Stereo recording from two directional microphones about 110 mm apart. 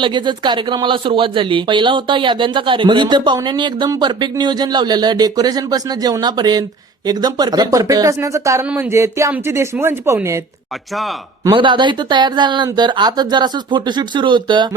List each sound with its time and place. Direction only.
0.0 s speech: 45° right (ahead or behind); by 10.2 s 20° right (ahead or behind)
11.5 s speech: 45° right (ahead or behind)